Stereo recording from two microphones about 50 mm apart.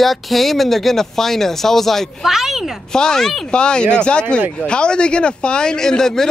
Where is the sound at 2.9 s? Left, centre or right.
Centre.